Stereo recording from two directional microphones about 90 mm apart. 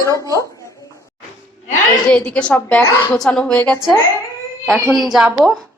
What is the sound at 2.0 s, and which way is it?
A woman's voice, 10° left (ahead or behind).